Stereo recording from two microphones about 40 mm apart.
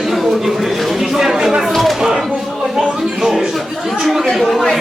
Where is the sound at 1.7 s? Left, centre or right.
Centre.